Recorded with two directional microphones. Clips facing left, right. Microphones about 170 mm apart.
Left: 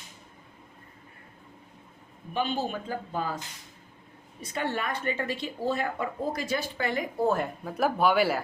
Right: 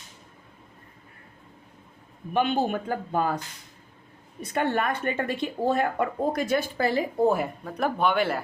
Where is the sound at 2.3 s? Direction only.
60° right (ahead or behind).